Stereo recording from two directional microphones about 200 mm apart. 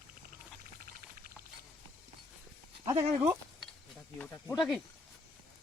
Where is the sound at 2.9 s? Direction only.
15° right (ahead or behind).